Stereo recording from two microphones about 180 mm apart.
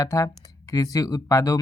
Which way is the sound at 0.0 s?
20° left (ahead or behind).